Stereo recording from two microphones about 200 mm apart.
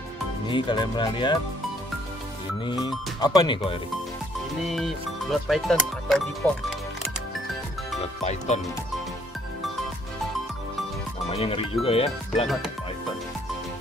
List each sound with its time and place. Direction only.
0.5 s speech: 25° left (ahead or behind)
2.6 s speech: 20° left (ahead or behind)
4.6 s speech: centre (ahead or behind)
8.0 s speech: 35° left (ahead or behind)
11.2 s speech: 30° left (ahead or behind)